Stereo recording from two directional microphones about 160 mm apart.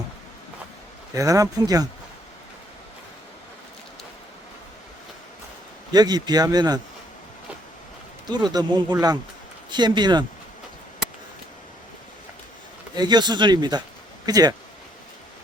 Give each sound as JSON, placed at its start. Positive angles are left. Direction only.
{"t": 1.1, "sound": "speech", "side_deg": -20}
{"t": 5.9, "sound": "speech", "side_deg": -25}
{"t": 8.3, "sound": "speech", "side_deg": -25}
{"t": 12.9, "sound": "speech", "side_deg": -25}